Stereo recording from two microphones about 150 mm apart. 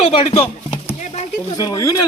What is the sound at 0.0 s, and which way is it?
Speech, 40° left (ahead or behind).